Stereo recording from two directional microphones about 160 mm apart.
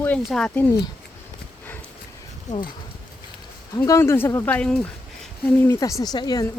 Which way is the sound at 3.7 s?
20° left (ahead or behind).